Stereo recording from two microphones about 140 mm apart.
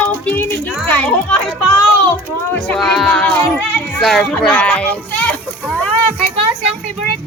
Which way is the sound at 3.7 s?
10° left (ahead or behind).